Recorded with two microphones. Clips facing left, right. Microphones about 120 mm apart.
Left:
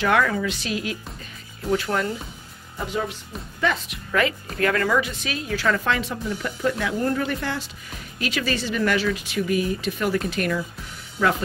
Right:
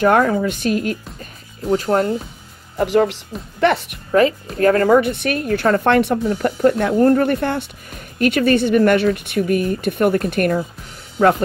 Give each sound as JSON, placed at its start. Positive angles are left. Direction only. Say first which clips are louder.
{"t": 0.0, "sound": "speech", "louder": "right 6 dB", "side_deg": -40}
{"t": 0.5, "sound": "a woman's voice", "louder": "right 8 dB", "side_deg": -50}
{"t": 1.7, "sound": "speech", "louder": "right 7 dB", "side_deg": -35}
{"t": 2.8, "sound": "speech", "louder": "right 12 dB", "side_deg": -80}
{"t": 3.6, "sound": "speech", "louder": "right 8 dB", "side_deg": -65}
{"t": 4.1, "sound": "speech", "louder": "right 8 dB", "side_deg": -35}
{"t": 5.1, "sound": "a woman's voice", "louder": "right 9 dB", "side_deg": -60}